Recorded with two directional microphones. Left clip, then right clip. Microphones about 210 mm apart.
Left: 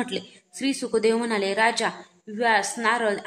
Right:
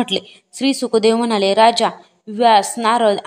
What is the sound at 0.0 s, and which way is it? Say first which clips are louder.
A woman's voice: right 9 dB; 35° right (ahead or behind).